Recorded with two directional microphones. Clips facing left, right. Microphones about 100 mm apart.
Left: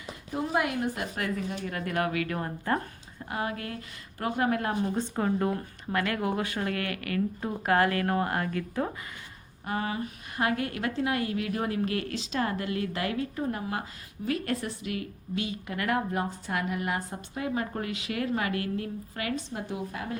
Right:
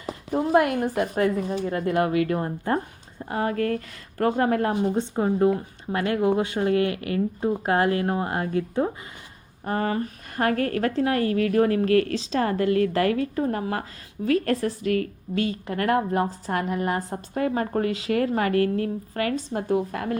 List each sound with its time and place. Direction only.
0.3 s speech: 50° right (ahead or behind)
1.5 s a woman's voice: 30° right (ahead or behind)
4.8 s speech: 25° right (ahead or behind)
9.6 s speech: 45° right (ahead or behind)
12.1 s a woman's voice: 35° right (ahead or behind); by 20.1 s 55° right (ahead or behind)